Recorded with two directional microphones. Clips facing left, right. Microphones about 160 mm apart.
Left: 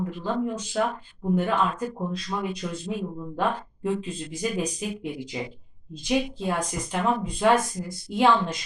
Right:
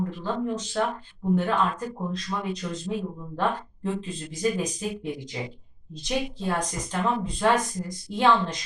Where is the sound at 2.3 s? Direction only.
10° left (ahead or behind).